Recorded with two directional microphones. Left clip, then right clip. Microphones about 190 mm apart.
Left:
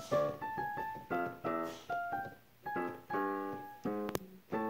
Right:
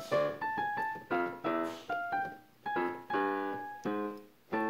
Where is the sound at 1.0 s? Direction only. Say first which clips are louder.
Right 1 dB; 45° right (ahead or behind).